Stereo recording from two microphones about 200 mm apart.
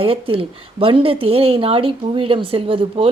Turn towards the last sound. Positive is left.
turn(degrees=-25)  # may be behind; listen again after turning